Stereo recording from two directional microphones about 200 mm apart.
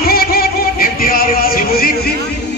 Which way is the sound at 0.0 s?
50° left (ahead or behind).